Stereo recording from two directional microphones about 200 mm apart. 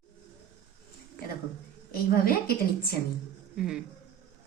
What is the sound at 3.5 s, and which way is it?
Speech, centre (ahead or behind).